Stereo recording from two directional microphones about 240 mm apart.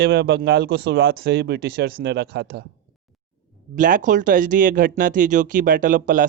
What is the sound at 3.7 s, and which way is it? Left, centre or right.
Speech, right.